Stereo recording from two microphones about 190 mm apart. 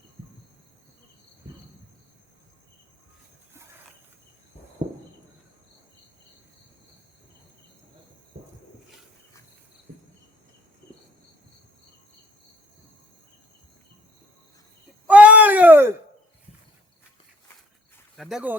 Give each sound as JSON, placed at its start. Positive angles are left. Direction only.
{"t": 4.8, "sound": "horse", "side_deg": -40}
{"t": 15.0, "sound": "groan", "side_deg": -5}
{"t": 18.2, "sound": "speech", "side_deg": -5}